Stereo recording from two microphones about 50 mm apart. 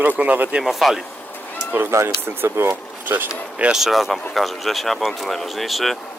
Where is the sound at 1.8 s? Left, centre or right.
Right.